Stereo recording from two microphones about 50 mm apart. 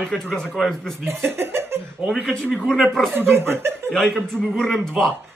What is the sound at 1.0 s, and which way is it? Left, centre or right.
Speech, right.